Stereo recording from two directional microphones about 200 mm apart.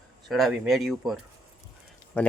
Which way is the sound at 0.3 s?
Centre (ahead or behind).